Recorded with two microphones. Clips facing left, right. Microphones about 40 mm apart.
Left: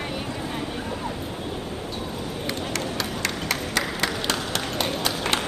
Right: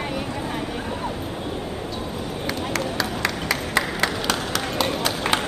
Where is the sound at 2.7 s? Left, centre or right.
Right.